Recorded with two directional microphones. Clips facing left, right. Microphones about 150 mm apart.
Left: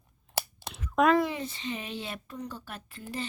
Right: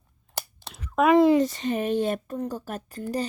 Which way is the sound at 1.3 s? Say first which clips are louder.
Right 13 dB; 40° right (ahead or behind).